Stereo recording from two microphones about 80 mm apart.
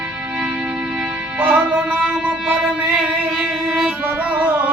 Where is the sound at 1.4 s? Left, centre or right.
Centre.